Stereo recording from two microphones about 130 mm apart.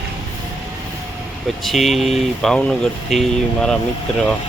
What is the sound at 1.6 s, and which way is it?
Speech, centre (ahead or behind).